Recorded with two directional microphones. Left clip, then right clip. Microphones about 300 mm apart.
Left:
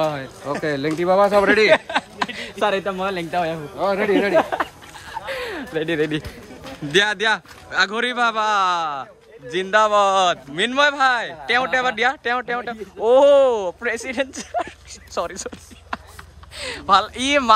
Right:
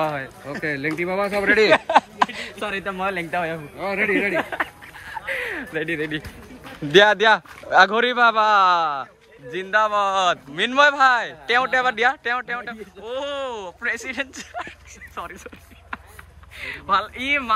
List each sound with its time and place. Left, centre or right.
0.0 s speech: centre
1.6 s a sound: centre
2.8 s speech: centre
5.1 s a sound: centre
5.9 s speech: centre
6.9 s speech: centre
16.5 s speech: centre